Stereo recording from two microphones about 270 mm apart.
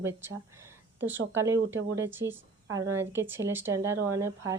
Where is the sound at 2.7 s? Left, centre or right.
Centre.